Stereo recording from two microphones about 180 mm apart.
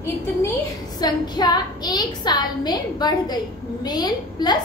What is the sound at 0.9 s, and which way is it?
A woman's voice, 25° left (ahead or behind).